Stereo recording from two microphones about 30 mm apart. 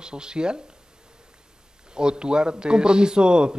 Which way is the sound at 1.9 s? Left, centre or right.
Right.